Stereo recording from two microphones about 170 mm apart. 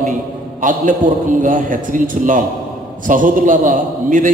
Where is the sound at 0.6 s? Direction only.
50° right (ahead or behind).